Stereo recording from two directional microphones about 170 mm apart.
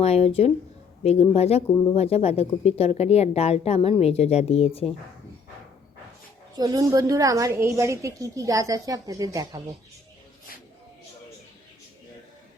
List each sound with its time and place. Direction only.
0.0 s a woman's voice: 35° left (ahead or behind)
6.6 s a woman's voice: 20° right (ahead or behind)